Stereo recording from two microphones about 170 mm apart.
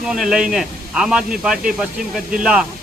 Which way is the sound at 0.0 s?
5° right (ahead or behind).